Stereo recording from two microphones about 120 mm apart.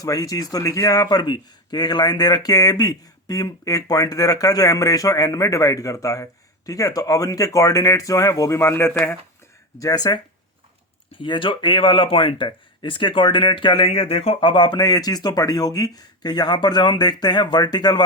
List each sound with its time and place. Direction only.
0.0 s speech: 30° left (ahead or behind)
9.7 s speech: 30° left (ahead or behind)
11.2 s speech: 45° left (ahead or behind)